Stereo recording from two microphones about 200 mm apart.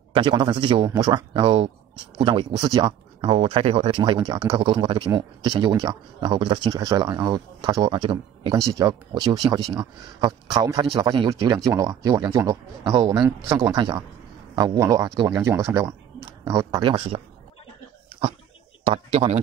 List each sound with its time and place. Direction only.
0.1 s a man's voice: 25° right (ahead or behind)
18.9 s a man's voice: 30° right (ahead or behind)